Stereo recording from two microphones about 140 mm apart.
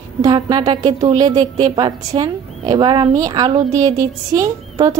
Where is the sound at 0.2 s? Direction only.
30° right (ahead or behind).